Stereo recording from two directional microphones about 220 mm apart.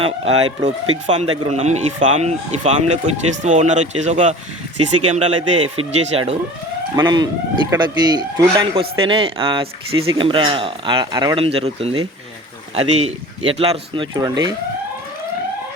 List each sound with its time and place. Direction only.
0.6 s speech: 30° right (ahead or behind)